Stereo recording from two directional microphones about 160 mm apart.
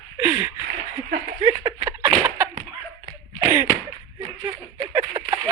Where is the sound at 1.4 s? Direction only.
20° right (ahead or behind).